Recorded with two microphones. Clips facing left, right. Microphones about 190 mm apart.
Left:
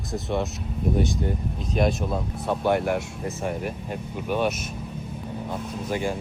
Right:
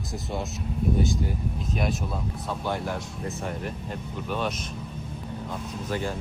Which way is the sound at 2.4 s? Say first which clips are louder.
Left 8 dB; 60° left (ahead or behind).